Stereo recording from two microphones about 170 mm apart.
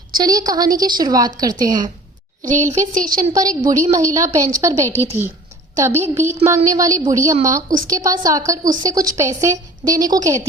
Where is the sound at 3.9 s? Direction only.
20° right (ahead or behind).